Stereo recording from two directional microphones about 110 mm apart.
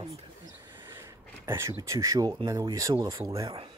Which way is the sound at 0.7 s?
20° right (ahead or behind).